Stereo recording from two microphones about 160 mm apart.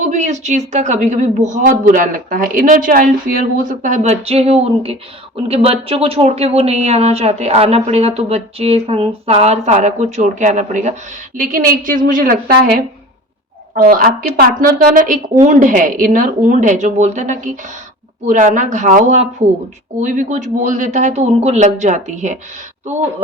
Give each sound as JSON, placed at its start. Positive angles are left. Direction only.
{"t": 0.0, "sound": "a woman's voice", "side_deg": -50}